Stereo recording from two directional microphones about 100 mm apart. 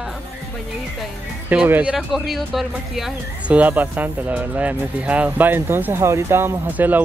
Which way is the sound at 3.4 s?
15° right (ahead or behind).